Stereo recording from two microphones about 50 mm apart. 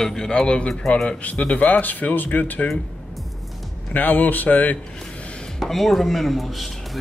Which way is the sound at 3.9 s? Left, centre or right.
Left.